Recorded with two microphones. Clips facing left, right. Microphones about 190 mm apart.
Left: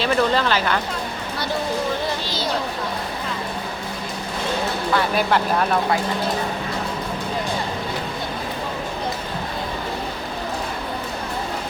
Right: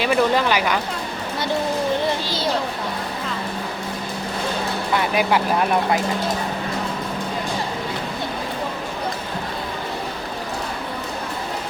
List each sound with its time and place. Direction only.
0.0 s speech: 10° right (ahead or behind)
4.9 s speech: 10° right (ahead or behind)